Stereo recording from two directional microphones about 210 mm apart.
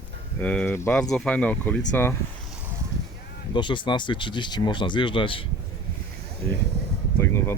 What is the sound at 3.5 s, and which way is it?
Speech, 20° left (ahead or behind).